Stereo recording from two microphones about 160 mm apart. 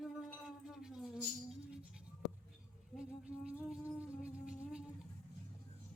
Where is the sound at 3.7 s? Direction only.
5° right (ahead or behind).